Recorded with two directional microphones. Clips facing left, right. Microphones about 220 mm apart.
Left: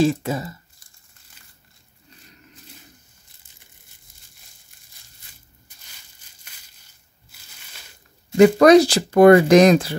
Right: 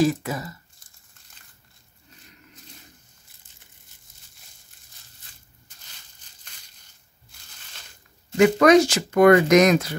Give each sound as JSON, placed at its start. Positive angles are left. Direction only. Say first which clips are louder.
{"t": 0.0, "sound": "speech", "louder": "left 2 dB", "side_deg": 25}
{"t": 7.3, "sound": "crushing", "louder": "left 1 dB", "side_deg": 5}
{"t": 8.4, "sound": "speech", "louder": "left 4 dB", "side_deg": 35}